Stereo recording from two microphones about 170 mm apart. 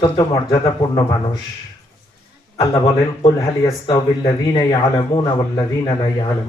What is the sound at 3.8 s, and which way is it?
A man's voice, 20° left (ahead or behind).